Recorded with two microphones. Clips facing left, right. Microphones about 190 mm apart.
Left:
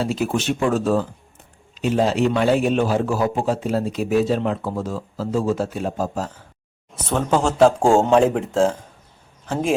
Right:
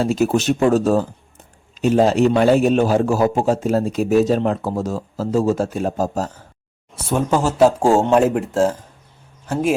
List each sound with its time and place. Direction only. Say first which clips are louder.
0.0 s a man's voice: right 5 dB; 45° right (ahead or behind)
6.9 s speech: right 1 dB; 10° right (ahead or behind)